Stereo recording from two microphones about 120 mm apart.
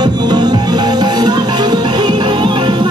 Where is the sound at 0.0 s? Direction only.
35° right (ahead or behind).